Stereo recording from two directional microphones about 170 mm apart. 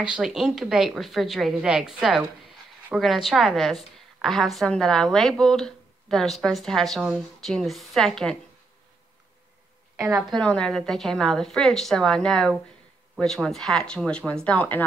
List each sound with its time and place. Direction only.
0.0 s a woman's voice: 5° right (ahead or behind)
9.9 s a woman's voice: 15° right (ahead or behind)
10.3 s a woman's voice: 5° left (ahead or behind)